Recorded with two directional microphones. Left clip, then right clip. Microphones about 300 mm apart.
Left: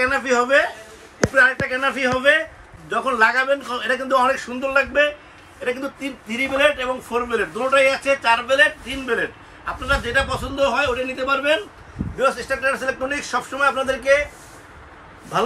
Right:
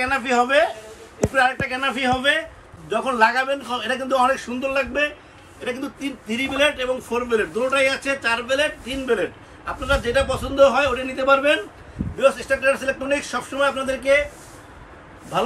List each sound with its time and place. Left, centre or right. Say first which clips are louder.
0.0 s a man's voice: left 1 dB; centre